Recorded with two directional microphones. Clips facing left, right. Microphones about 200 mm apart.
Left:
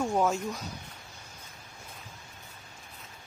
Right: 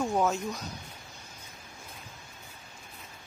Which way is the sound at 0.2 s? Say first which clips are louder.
Even; 5° right (ahead or behind).